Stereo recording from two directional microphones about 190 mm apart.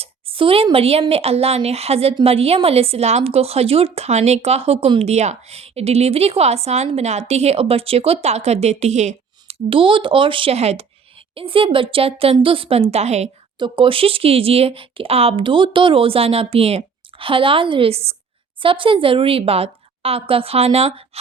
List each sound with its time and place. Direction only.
0.0 s speech: 30° right (ahead or behind)